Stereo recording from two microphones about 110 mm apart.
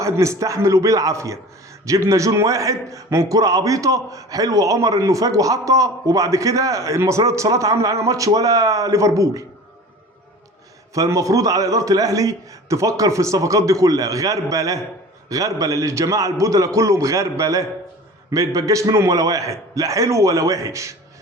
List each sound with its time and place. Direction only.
0.0 s a man's voice: 25° right (ahead or behind)
10.9 s a man's voice: 30° right (ahead or behind)